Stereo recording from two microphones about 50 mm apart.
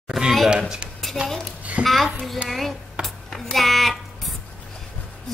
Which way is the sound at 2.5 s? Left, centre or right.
Centre.